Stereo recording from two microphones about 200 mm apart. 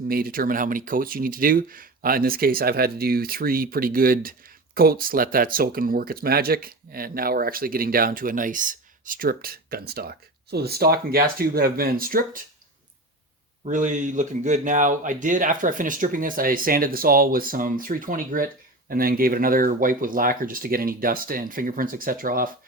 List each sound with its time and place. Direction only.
0.1 s speech: 45° right (ahead or behind)
13.7 s speech: 40° right (ahead or behind)